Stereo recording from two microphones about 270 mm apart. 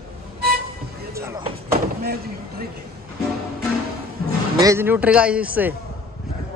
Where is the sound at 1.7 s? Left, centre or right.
Right.